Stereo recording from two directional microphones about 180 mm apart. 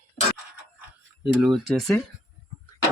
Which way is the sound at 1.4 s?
Centre (ahead or behind).